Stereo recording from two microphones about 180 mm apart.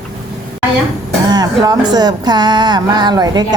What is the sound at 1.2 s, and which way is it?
Speech, 20° right (ahead or behind).